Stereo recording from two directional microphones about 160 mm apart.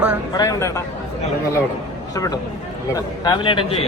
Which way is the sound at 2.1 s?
20° left (ahead or behind).